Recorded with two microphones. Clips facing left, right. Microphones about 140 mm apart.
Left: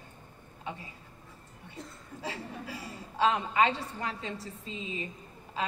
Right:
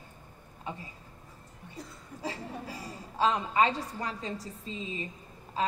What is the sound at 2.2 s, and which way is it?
A woman's voice, 40° right (ahead or behind).